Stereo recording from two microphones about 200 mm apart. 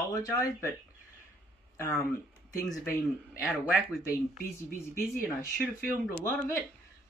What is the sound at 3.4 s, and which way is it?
Speech, 5° right (ahead or behind).